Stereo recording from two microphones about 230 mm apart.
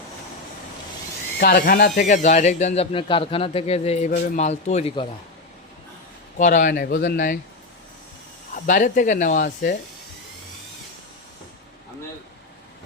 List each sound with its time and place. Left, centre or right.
1.4 s speech: left
6.3 s speech: left
8.5 s speech: left